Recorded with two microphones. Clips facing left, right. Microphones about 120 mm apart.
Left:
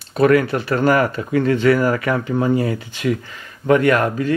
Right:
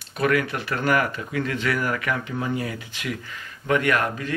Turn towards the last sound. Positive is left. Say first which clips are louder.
# left 7 dB
turn(degrees=35)  # may be behind; listen again after turning